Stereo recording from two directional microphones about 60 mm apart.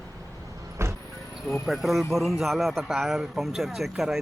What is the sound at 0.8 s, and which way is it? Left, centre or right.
Vehicle, right.